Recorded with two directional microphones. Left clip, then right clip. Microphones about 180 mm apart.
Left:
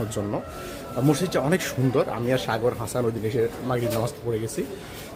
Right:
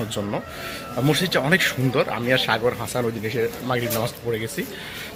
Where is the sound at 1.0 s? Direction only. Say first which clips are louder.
Right 2 dB; 10° left (ahead or behind).